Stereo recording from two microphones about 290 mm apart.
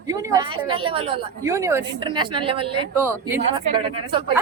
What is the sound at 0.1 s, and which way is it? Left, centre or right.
A woman's voice, centre.